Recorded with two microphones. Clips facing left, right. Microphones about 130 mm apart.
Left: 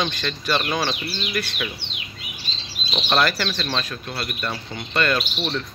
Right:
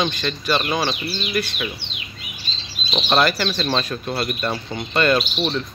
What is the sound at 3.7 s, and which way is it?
Speech, 30° right (ahead or behind).